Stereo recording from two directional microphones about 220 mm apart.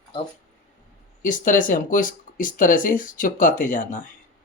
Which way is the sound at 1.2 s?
35° left (ahead or behind).